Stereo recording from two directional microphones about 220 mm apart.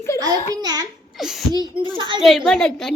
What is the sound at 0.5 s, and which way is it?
Speech, 20° right (ahead or behind).